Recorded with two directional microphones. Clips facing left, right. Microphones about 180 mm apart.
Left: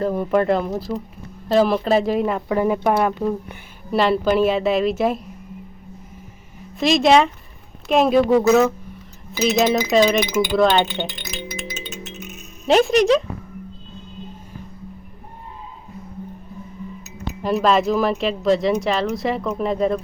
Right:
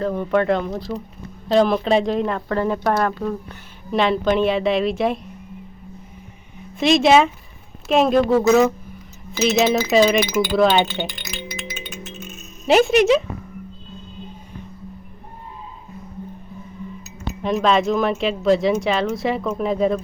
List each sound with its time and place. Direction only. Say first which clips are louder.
0.0 s speech: left 1 dB; 10° left (ahead or behind)
6.7 s speech: right 1 dB; centre (ahead or behind)
11.8 s music: left 1 dB; 20° left (ahead or behind)
12.6 s speech: right 1 dB; 5° right (ahead or behind)
17.4 s speech: even; centre (ahead or behind)